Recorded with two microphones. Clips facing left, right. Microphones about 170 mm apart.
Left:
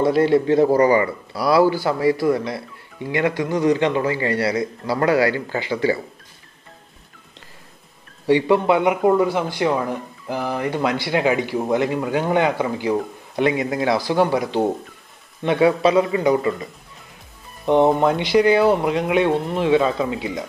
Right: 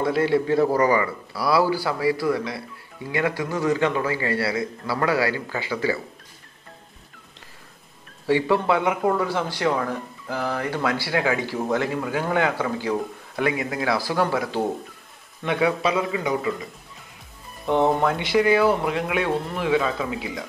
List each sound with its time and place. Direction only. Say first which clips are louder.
0.0 s a man's voice: left 5 dB; 25° left (ahead or behind)
1.9 s a man's voice: left 4 dB; 50° left (ahead or behind)
3.1 s a man's voice: left 4 dB; 20° left (ahead or behind)
8.3 s a man's voice: left 4 dB; 20° left (ahead or behind)
15.4 s a man's voice: left 6 dB; 30° left (ahead or behind)
17.6 s a man's voice: left 4 dB; 20° left (ahead or behind)